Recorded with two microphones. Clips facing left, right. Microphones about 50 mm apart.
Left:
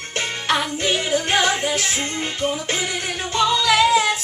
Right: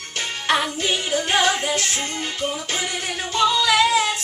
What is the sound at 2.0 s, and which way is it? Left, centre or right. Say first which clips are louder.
Music: left 2 dB; left.